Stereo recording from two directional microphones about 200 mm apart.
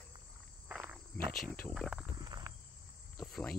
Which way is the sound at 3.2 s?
Centre (ahead or behind).